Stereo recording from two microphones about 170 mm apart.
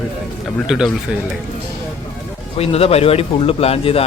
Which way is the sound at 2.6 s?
35° left (ahead or behind).